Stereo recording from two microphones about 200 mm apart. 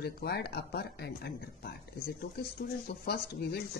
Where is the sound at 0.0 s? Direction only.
55° left (ahead or behind).